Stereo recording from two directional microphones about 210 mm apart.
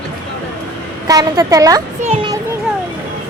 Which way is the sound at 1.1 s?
15° right (ahead or behind).